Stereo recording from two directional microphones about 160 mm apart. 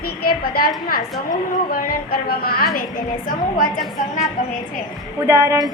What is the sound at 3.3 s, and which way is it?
Speech, 60° left (ahead or behind).